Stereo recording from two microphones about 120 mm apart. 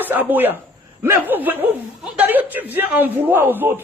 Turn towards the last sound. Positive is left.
turn(degrees=-15)  # may be behind; listen again after turning